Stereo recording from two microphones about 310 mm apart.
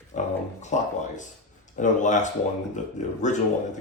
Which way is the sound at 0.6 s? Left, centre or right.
Left.